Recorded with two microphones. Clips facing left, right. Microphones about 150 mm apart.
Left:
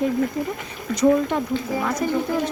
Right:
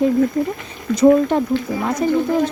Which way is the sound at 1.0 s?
35° right (ahead or behind).